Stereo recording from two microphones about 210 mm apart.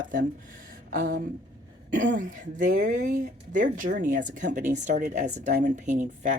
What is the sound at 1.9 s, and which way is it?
Speech, 40° right (ahead or behind).